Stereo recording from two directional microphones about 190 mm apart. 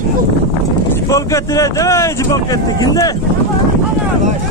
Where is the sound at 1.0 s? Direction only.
15° left (ahead or behind).